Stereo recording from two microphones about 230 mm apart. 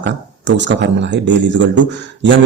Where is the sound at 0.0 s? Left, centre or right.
Right.